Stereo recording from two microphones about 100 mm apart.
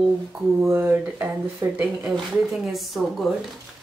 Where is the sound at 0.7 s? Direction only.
25° right (ahead or behind).